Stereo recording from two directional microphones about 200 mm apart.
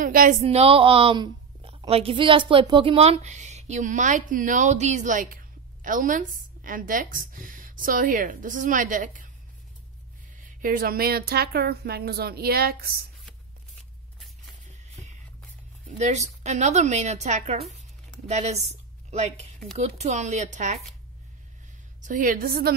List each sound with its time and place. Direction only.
0.0 s a woman's voice: 45° right (ahead or behind)
10.4 s speech: 45° right (ahead or behind)
16.0 s a woman's voice: 35° right (ahead or behind)
22.0 s speech: 40° right (ahead or behind)